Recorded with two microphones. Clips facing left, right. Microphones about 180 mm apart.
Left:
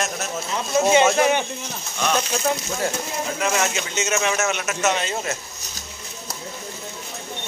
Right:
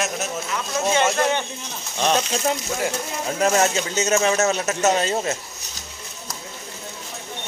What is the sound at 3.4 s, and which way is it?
Speech, 40° right (ahead or behind).